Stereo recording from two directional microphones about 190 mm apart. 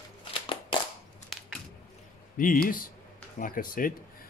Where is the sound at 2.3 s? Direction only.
45° left (ahead or behind).